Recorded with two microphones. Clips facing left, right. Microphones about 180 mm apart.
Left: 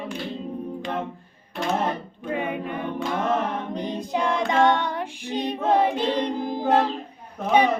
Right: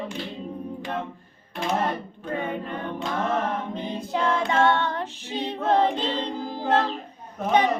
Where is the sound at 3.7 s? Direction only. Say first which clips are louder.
Left 2 dB; 15° left (ahead or behind).